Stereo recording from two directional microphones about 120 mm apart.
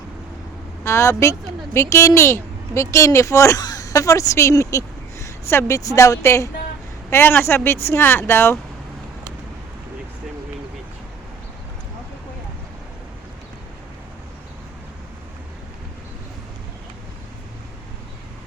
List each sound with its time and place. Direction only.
0.9 s a woman's voice: 25° left (ahead or behind)